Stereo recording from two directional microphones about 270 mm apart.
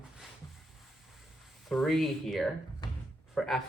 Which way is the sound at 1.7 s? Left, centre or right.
Centre.